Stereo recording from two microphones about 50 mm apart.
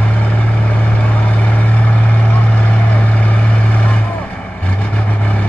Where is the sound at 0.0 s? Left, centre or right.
Left.